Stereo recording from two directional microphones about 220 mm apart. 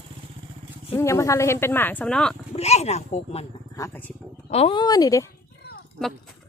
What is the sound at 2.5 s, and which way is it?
Speech, 30° left (ahead or behind).